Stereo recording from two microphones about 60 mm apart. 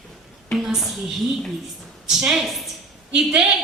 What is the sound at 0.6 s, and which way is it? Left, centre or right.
Speech, centre.